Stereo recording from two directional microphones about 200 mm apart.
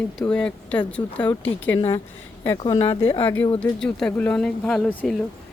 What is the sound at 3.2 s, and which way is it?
Speech, 10° left (ahead or behind).